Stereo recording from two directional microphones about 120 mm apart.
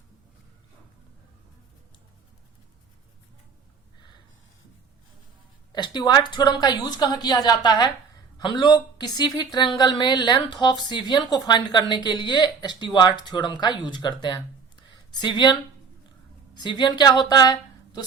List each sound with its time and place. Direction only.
5.7 s speech: 40° left (ahead or behind)
16.6 s a woman's voice: 35° left (ahead or behind)